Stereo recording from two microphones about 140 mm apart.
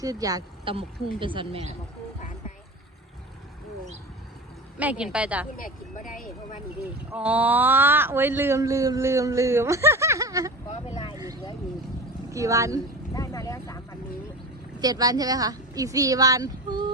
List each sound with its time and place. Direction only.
0.0 s speech: 25° right (ahead or behind)
0.6 s speech: 40° right (ahead or behind)
4.8 s a woman's voice: 10° right (ahead or behind)
5.5 s speech: 75° left (ahead or behind)
7.1 s speech: 10° right (ahead or behind)
11.1 s vehicle: 25° right (ahead or behind)
12.3 s speech: 25° right (ahead or behind)
13.1 s speech: 25° left (ahead or behind)
14.8 s speech: 30° right (ahead or behind)